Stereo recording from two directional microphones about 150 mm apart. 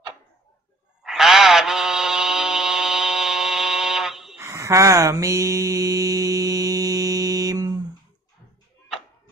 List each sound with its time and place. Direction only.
1.0 s music: centre (ahead or behind)
4.4 s mantra: 20° right (ahead or behind)